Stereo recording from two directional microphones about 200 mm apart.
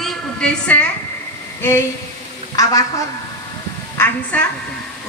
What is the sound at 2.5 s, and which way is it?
Speech, 15° left (ahead or behind).